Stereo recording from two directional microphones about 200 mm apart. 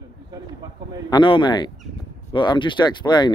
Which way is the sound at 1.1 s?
25° left (ahead or behind).